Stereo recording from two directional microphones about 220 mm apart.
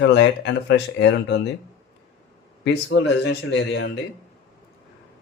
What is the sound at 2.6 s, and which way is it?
Speech, 50° left (ahead or behind).